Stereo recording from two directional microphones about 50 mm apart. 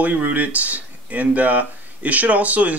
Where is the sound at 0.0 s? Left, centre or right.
Right.